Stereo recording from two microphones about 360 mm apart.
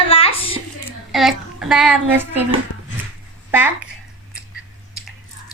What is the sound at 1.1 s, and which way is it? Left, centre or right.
A woman's voice, centre.